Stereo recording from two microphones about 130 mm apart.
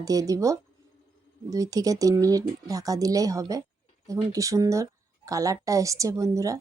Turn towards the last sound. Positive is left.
turn(degrees=-25)  # may be behind; listen again after turning